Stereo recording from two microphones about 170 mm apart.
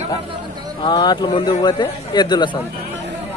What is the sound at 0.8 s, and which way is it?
A man's voice, 25° left (ahead or behind).